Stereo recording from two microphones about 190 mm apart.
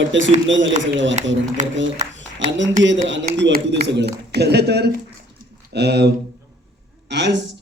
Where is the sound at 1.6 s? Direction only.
40° right (ahead or behind).